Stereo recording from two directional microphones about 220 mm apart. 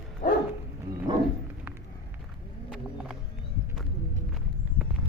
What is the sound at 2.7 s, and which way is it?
Music, 5° right (ahead or behind).